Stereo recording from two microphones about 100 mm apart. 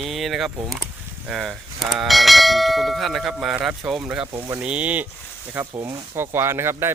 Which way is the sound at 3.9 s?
5° right (ahead or behind).